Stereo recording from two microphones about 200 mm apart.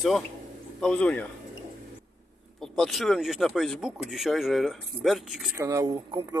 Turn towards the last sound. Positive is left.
turn(degrees=-20)  # may be behind; listen again after turning